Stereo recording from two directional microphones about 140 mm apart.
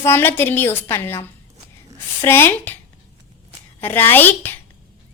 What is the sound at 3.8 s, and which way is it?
Speech, 15° left (ahead or behind).